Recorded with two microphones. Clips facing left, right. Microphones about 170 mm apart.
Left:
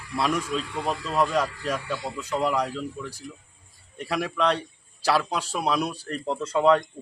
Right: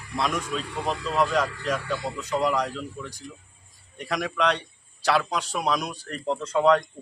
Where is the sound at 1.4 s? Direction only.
10° left (ahead or behind).